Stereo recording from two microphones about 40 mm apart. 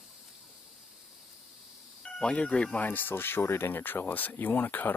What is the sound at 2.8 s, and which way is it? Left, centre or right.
Speech, left.